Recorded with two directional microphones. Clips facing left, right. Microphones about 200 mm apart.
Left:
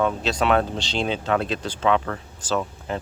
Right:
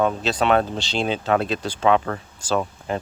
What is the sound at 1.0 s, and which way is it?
Speech, 40° right (ahead or behind).